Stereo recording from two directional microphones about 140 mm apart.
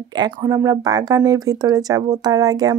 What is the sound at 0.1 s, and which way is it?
Speech, 30° right (ahead or behind).